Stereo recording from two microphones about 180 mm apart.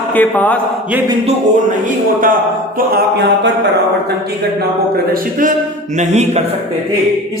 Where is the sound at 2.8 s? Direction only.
60° right (ahead or behind).